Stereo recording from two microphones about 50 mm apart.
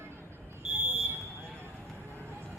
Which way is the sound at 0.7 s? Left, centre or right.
Centre.